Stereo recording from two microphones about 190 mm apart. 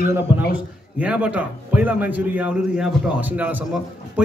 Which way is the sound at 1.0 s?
5° right (ahead or behind).